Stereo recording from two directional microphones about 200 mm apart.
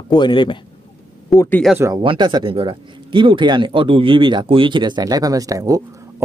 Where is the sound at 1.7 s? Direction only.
15° right (ahead or behind).